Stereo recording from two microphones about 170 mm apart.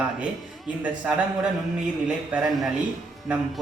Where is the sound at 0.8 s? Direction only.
5° right (ahead or behind).